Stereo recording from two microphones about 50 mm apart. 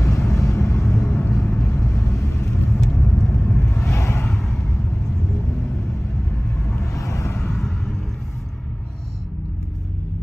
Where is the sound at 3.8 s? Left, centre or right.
Left.